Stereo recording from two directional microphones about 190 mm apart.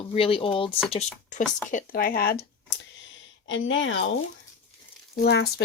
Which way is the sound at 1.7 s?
50° left (ahead or behind).